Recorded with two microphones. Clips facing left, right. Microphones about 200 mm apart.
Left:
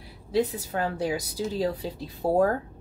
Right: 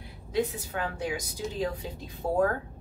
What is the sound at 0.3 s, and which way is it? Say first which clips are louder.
A woman's voice: left 4 dB; 35° left (ahead or behind).